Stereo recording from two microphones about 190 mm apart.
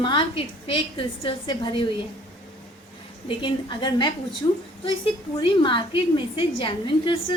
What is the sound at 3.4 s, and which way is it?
A woman's voice, 25° left (ahead or behind).